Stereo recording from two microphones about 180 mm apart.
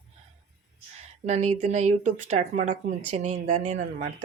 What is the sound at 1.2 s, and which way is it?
Speech, 35° right (ahead or behind).